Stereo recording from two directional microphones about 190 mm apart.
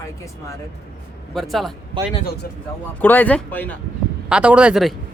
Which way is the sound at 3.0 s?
10° left (ahead or behind).